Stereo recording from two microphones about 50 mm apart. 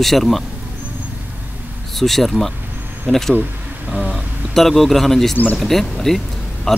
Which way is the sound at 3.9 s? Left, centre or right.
Right.